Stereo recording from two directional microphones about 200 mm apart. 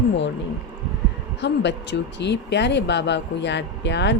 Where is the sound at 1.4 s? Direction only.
60° left (ahead or behind).